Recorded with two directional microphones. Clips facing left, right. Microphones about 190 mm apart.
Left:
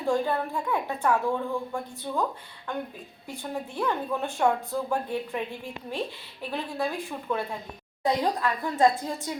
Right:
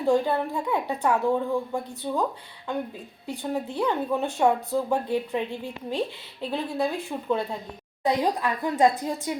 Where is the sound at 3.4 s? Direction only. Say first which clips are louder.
Right 4 dB; 15° right (ahead or behind).